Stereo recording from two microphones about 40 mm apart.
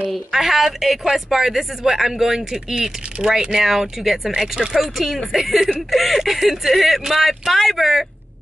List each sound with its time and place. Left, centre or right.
0.3 s speech: centre
4.9 s speech: centre